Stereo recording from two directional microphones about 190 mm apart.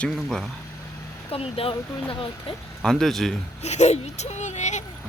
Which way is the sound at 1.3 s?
30° left (ahead or behind).